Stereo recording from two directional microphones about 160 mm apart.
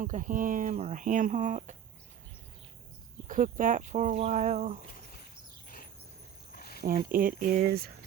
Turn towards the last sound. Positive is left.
turn(degrees=-75)  # may be behind; listen again after turning